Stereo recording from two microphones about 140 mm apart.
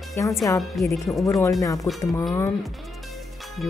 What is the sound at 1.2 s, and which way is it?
Speech, 20° left (ahead or behind).